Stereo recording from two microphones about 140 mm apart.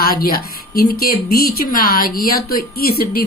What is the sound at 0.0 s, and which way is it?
A woman's voice, 90° left.